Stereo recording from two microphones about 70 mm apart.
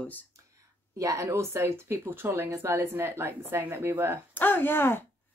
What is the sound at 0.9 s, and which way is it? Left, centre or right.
Speech, right.